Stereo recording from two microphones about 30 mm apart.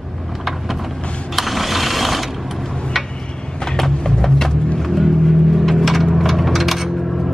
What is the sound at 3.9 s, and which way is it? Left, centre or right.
Music, left.